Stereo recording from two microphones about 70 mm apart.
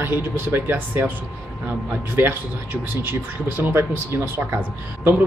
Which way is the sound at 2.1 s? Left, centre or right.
Right.